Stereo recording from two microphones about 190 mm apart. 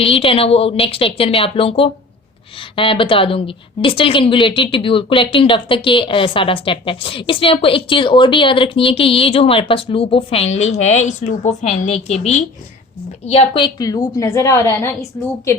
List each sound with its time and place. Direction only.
0.0 s a woman's voice: 30° left (ahead or behind)
13.7 s a woman's voice: 20° left (ahead or behind)